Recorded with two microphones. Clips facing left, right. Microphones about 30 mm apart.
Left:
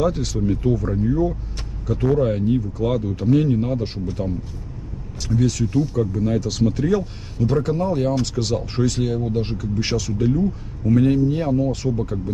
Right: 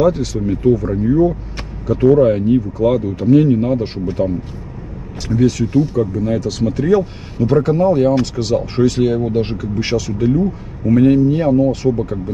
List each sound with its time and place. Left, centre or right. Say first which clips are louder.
0.0 s speech: right 7 dB; centre
0.5 s speech: right 8 dB; centre
5.3 s speech: right 6 dB; right
6.4 s speech: right 2 dB; centre
6.8 s speech: right 6 dB; right
9.8 s speech: right 5 dB; centre
10.9 s speech: right 6 dB; right